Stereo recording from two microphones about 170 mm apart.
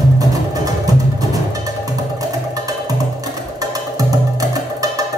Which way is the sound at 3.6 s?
20° right (ahead or behind).